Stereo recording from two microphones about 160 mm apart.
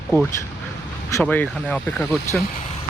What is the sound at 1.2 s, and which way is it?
Speech, 10° left (ahead or behind).